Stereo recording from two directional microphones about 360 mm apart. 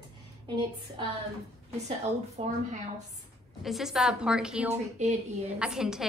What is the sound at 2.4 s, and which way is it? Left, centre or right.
Speech, centre.